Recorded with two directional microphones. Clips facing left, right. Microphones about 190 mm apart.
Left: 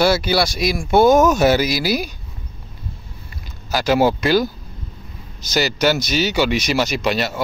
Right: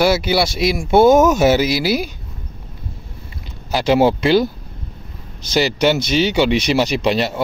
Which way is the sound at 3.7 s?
25° right (ahead or behind).